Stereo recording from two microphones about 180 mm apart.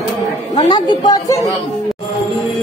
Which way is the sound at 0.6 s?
25° left (ahead or behind).